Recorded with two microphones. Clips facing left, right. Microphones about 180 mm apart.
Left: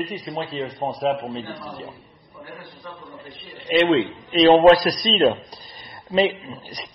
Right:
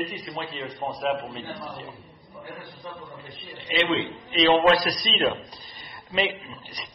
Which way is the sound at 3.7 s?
45° left (ahead or behind).